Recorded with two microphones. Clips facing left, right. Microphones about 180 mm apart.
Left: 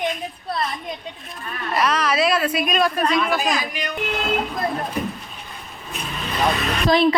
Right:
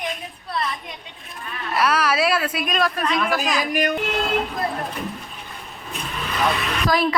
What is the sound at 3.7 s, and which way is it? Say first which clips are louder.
Speech: right 8 dB; 50° right (ahead or behind).